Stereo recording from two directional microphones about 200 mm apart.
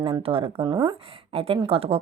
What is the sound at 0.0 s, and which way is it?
Speech, 25° right (ahead or behind).